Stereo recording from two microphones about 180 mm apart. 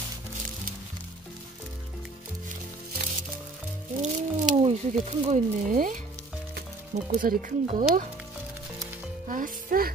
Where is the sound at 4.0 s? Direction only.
40° right (ahead or behind).